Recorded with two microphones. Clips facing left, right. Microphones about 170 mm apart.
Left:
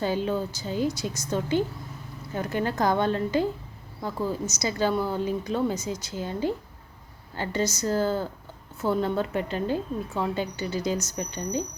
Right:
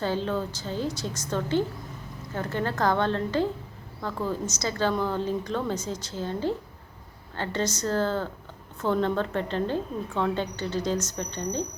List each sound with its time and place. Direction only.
0.0 s speech: 10° left (ahead or behind)